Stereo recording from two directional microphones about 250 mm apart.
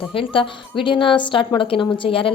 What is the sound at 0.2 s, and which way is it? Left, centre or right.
Speech, left.